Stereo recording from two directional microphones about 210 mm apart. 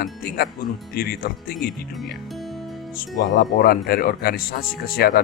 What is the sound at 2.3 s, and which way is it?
Music, centre (ahead or behind).